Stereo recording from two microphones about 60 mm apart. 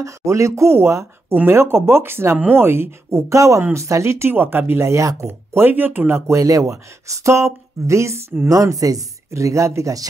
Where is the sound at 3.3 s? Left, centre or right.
Right.